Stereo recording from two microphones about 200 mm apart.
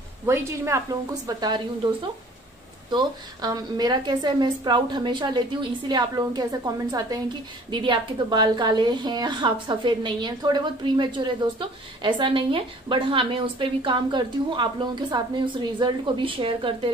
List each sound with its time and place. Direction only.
0.3 s a woman's voice: 15° right (ahead or behind)
2.9 s a woman's voice: 20° right (ahead or behind)